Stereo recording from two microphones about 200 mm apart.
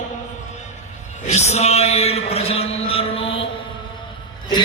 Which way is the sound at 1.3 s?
35° left (ahead or behind).